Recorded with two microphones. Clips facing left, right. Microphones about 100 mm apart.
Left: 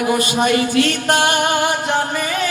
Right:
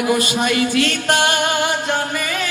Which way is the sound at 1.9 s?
25° left (ahead or behind).